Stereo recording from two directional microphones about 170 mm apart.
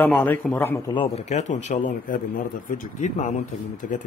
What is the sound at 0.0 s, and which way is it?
Speech, 10° left (ahead or behind).